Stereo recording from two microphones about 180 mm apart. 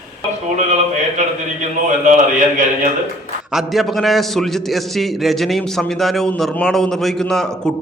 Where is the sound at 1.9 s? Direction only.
45° right (ahead or behind).